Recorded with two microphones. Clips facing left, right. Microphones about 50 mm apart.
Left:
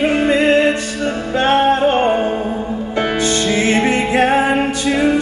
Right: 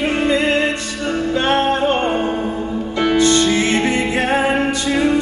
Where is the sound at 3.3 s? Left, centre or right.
Left.